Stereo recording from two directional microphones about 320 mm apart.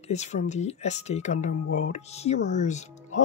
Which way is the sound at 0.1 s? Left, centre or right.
Left.